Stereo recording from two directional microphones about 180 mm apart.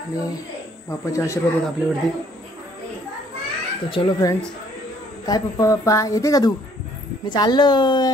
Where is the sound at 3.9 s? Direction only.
25° left (ahead or behind).